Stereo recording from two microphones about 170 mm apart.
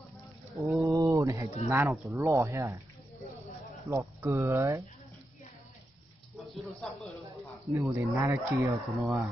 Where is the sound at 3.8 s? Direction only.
15° right (ahead or behind).